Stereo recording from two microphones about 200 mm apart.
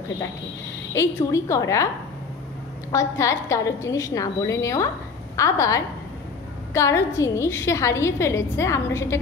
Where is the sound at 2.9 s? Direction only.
15° left (ahead or behind).